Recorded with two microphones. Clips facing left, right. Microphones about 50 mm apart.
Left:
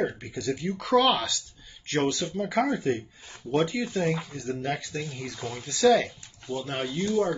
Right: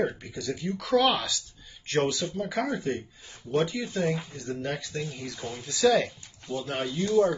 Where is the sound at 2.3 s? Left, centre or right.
Centre.